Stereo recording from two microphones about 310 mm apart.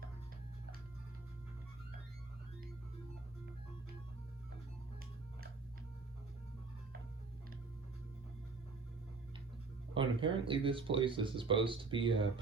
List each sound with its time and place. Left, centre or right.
9.9 s speech: centre